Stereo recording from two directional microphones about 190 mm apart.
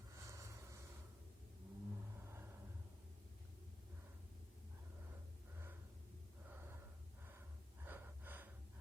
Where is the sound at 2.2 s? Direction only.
10° right (ahead or behind).